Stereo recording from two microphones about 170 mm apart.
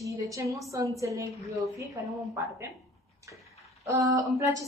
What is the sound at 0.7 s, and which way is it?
A woman's voice, 20° right (ahead or behind).